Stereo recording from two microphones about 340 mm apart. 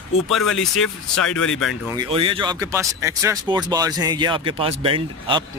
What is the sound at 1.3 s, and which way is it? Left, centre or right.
Speech, left.